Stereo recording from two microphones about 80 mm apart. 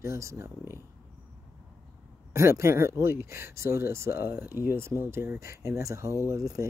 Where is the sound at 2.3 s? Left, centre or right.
Right.